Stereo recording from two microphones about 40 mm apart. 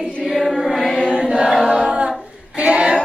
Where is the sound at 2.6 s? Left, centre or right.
Right.